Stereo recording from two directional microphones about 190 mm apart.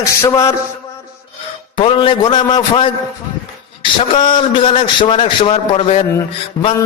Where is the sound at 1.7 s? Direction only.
25° left (ahead or behind).